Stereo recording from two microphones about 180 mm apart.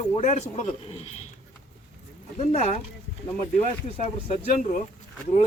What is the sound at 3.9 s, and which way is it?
Speech, 30° left (ahead or behind).